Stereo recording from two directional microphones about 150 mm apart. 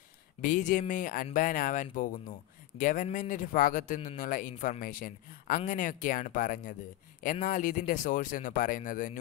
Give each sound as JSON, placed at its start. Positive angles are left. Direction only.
{"t": 0.4, "sound": "speech", "side_deg": 60}